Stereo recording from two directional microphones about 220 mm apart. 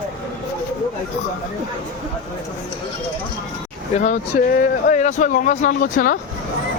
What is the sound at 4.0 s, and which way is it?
Speech, 35° left (ahead or behind).